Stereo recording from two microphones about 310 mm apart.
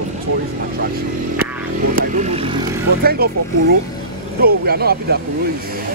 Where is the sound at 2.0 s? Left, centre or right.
Right.